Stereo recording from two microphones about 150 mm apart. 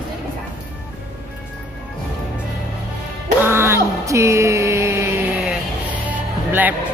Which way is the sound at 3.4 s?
15° right (ahead or behind).